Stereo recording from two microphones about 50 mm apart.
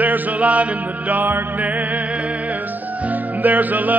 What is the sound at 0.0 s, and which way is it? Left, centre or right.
Music, right.